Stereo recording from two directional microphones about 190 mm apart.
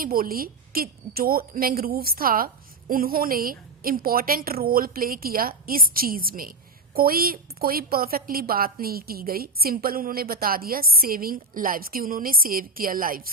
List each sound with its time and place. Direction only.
0.0 s a woman's voice: 50° right (ahead or behind)